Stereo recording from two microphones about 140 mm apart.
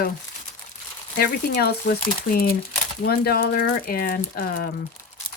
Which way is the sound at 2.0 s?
90° left.